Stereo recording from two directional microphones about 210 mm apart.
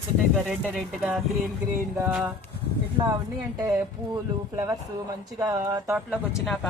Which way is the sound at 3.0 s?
15° right (ahead or behind).